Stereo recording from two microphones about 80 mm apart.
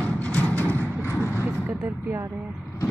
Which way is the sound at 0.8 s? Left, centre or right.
Right.